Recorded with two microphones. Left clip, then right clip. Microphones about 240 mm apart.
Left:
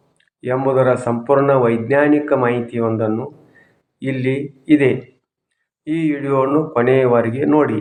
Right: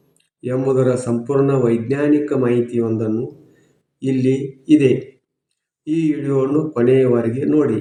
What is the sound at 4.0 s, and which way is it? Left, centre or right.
Speech, left.